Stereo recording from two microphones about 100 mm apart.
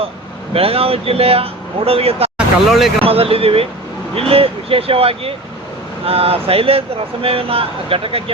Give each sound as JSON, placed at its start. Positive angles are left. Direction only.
{"t": 0.5, "sound": "speech", "side_deg": -75}
{"t": 2.6, "sound": "speech", "side_deg": -5}
{"t": 3.0, "sound": "speech", "side_deg": -75}